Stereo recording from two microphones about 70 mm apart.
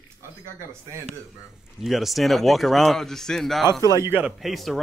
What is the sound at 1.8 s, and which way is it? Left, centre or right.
Speech, centre.